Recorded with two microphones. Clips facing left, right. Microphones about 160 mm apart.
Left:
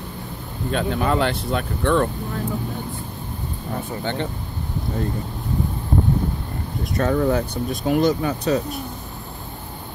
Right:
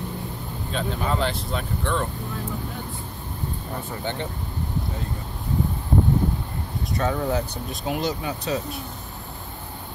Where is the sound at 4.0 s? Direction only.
65° left (ahead or behind).